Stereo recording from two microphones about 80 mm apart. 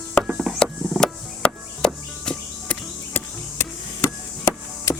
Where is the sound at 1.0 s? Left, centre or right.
Centre.